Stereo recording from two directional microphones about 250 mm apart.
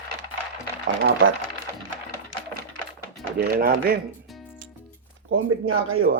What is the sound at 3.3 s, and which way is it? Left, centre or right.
Speech, right.